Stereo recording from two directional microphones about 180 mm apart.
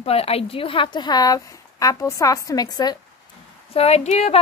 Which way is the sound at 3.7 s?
35° left (ahead or behind).